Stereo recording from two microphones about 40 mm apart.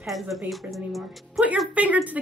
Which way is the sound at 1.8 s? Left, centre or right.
Right.